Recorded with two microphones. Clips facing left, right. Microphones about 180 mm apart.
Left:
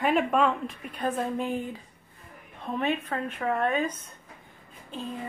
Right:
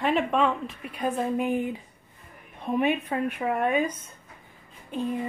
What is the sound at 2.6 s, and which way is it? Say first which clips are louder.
A woman's voice: right 4 dB; 15° right (ahead or behind).